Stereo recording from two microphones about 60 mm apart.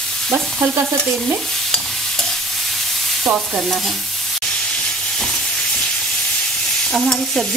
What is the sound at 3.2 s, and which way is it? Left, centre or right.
Stir, right.